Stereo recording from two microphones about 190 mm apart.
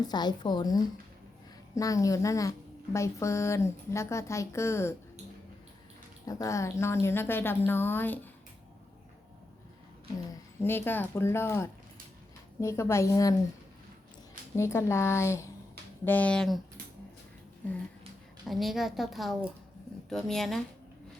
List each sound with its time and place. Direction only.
0.0 s a woman's voice: 20° left (ahead or behind)
6.2 s a woman's voice: 15° left (ahead or behind)
10.3 s a woman's voice: 10° left (ahead or behind)
14.5 s a woman's voice: 15° left (ahead or behind)
18.4 s a woman's voice: centre (ahead or behind)